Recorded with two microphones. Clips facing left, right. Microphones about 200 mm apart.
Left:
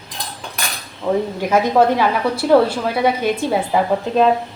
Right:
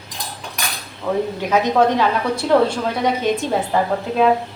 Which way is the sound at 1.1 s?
15° left (ahead or behind).